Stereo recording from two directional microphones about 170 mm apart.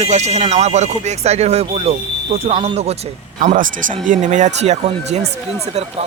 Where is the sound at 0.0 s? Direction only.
40° right (ahead or behind).